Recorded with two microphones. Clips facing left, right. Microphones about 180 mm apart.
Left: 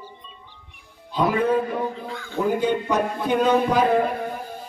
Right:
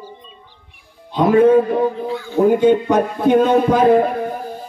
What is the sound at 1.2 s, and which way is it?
Speech, 45° right (ahead or behind).